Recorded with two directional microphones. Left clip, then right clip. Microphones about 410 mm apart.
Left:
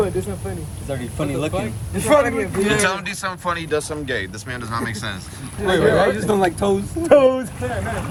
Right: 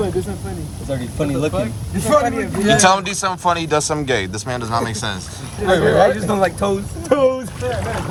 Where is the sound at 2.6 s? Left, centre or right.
Centre.